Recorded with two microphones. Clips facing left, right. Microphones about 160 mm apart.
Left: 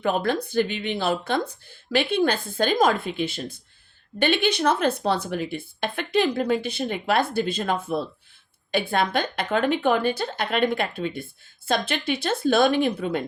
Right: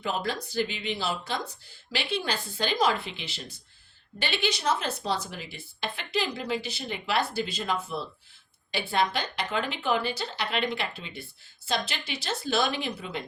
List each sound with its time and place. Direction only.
0.0 s speech: 55° left (ahead or behind)